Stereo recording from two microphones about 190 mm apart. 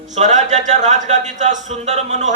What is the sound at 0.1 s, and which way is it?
A man's voice, 40° right (ahead or behind).